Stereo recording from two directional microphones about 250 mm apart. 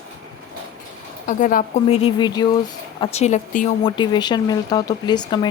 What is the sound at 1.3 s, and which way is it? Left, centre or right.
A woman's voice, left.